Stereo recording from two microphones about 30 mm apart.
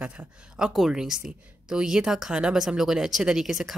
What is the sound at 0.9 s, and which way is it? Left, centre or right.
Speech, right.